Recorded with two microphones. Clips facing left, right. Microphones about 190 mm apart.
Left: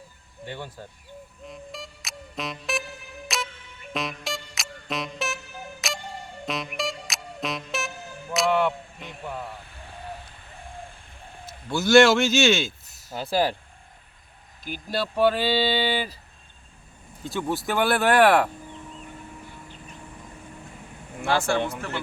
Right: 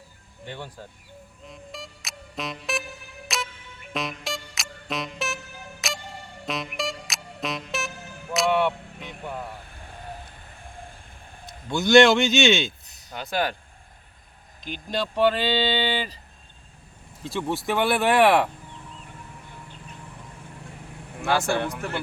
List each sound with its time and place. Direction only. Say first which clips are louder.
0.4 s speech: left 1 dB; 10° left (ahead or behind)
1.5 s music: left 1 dB; centre (ahead or behind)
11.7 s speech: even; centre (ahead or behind)
13.2 s speech: left 3 dB; 30° left (ahead or behind)
14.6 s speech: even; 5° left (ahead or behind)
17.2 s speech: even; centre (ahead or behind)
21.2 s speech: even; 15° right (ahead or behind)